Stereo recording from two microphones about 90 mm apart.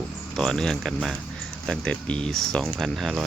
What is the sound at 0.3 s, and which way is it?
Speech, 5° left (ahead or behind).